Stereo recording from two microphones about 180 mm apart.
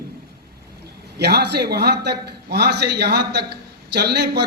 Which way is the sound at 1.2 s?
65° right (ahead or behind).